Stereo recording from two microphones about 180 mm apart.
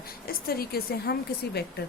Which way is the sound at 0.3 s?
55° left (ahead or behind).